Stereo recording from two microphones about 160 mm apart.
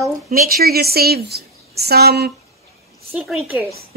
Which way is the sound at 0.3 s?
65° right (ahead or behind).